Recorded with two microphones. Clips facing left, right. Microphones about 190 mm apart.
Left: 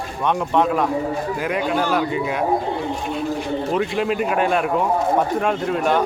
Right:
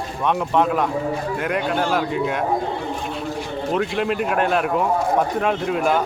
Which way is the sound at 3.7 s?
Centre (ahead or behind).